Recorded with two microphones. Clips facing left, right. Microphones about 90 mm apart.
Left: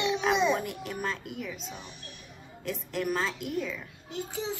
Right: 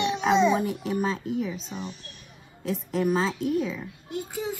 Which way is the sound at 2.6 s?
Centre (ahead or behind).